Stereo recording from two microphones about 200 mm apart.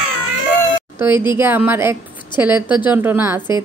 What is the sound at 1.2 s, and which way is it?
A woman's voice, 10° right (ahead or behind).